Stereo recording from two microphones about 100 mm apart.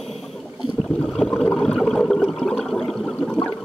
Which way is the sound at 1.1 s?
5° left (ahead or behind).